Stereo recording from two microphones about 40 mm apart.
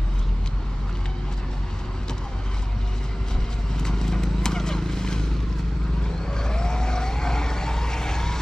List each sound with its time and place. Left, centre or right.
3.7 s horse: centre
6.3 s vehicle: centre